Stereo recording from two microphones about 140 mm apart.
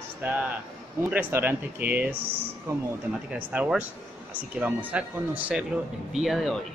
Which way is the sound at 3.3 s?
10° right (ahead or behind).